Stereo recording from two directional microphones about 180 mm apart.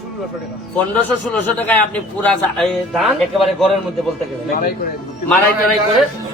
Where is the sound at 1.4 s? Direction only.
10° left (ahead or behind).